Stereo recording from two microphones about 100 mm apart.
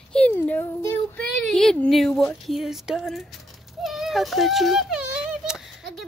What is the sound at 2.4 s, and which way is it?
Speech, centre (ahead or behind).